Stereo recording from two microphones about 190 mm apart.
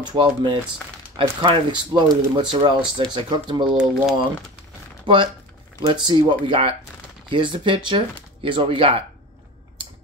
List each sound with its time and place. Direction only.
0.0 s speech: 25° right (ahead or behind)
3.6 s speech: 5° right (ahead or behind)
5.0 s speech: 25° right (ahead or behind)